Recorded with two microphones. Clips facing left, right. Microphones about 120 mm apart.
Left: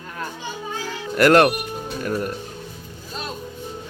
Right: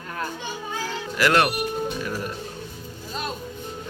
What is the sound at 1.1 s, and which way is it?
Speech, 45° left (ahead or behind).